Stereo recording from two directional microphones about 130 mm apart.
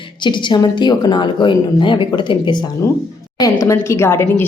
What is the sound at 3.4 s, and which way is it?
A woman's voice, 20° left (ahead or behind).